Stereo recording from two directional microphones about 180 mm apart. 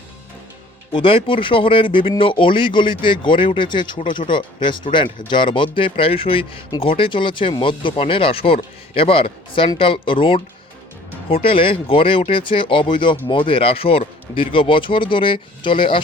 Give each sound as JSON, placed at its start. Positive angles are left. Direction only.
{"t": 0.9, "sound": "speech", "side_deg": 30}